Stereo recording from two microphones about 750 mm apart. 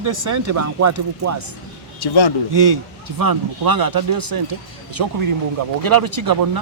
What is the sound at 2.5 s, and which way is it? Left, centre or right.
Speech, right.